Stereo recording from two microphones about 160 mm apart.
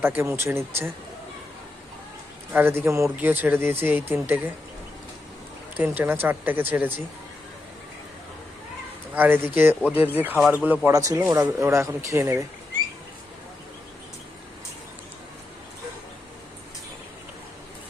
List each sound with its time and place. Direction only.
0.2 s speech: 15° right (ahead or behind)
2.5 s speech: 15° right (ahead or behind)
5.7 s speech: 10° right (ahead or behind)
9.1 s speech: 10° right (ahead or behind)